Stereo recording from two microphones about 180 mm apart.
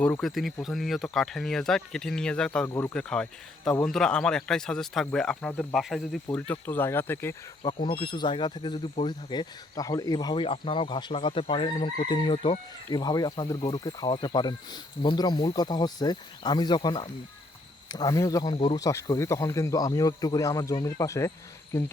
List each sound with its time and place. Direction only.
0.0 s speech: 5° left (ahead or behind)
2.9 s speech: 5° left (ahead or behind)
7.6 s speech: 25° left (ahead or behind)
18.5 s speech: 30° left (ahead or behind)
18.8 s speech: 20° left (ahead or behind)